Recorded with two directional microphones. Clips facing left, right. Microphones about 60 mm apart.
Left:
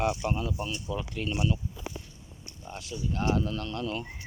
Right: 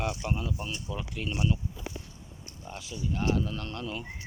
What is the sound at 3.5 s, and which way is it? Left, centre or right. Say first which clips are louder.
Speech: left 3 dB; right.